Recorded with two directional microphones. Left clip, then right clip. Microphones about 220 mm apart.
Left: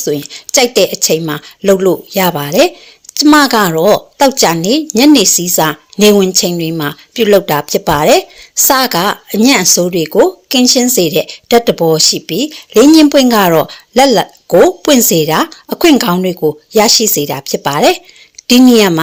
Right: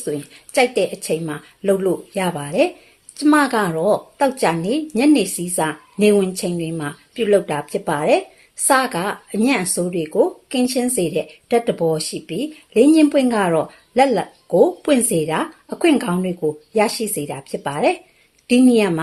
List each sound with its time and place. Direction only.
0.0 s speech: 35° left (ahead or behind)